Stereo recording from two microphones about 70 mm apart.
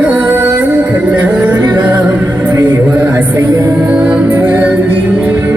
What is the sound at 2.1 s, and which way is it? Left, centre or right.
Music, right.